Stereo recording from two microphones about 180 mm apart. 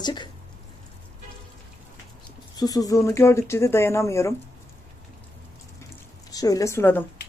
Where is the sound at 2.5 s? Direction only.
20° left (ahead or behind).